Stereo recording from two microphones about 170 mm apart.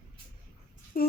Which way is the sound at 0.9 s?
60° left (ahead or behind).